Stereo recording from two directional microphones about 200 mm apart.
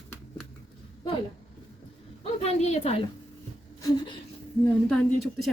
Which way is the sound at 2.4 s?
30° left (ahead or behind).